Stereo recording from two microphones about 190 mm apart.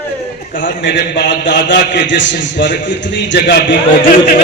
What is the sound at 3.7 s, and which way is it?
Speech, 45° left (ahead or behind).